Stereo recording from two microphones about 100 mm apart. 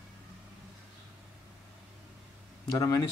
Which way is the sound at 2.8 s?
35° left (ahead or behind).